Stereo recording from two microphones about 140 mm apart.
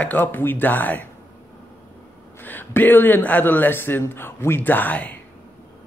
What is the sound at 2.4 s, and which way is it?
Speech, 15° left (ahead or behind).